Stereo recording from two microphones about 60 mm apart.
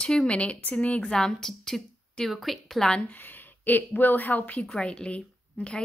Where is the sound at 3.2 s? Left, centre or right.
Left.